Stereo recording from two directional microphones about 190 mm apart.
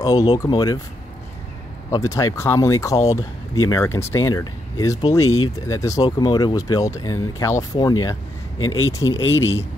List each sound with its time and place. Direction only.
0.0 s speech: 20° left (ahead or behind)
1.9 s speech: 15° left (ahead or behind)
5.2 s speech: 90° left
5.7 s speech: 15° left (ahead or behind)
8.5 s speech: 90° left